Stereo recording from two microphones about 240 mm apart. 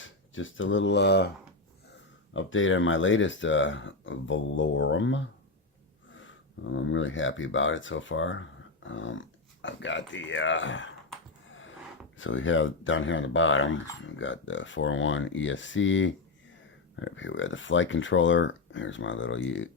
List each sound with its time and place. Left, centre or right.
0.0 s speech: left
2.3 s speech: left
12.1 s speech: left